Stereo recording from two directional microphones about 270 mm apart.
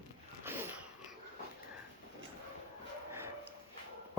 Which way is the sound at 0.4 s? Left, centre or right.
Centre.